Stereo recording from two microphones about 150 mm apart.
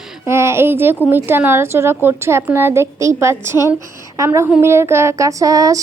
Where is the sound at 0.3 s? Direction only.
15° right (ahead or behind).